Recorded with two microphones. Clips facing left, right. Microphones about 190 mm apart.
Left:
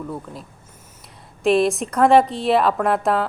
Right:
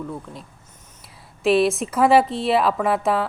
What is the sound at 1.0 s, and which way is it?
A woman's voice, centre (ahead or behind).